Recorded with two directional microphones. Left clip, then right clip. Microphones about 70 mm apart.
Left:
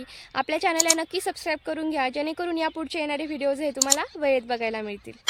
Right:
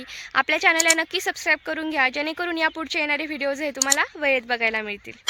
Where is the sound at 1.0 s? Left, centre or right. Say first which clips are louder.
Right 4 dB; left.